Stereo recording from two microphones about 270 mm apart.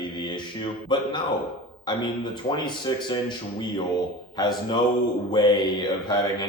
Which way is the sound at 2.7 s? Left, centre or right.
Centre.